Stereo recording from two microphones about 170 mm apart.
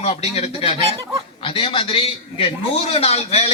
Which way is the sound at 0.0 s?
40° left (ahead or behind).